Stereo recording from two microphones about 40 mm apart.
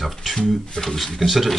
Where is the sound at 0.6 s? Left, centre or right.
Centre.